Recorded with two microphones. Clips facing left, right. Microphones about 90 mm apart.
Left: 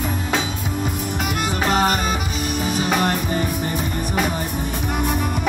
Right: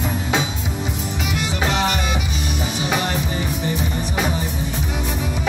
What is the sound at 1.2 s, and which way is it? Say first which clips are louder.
Music: left 1 dB; 50° left (ahead or behind).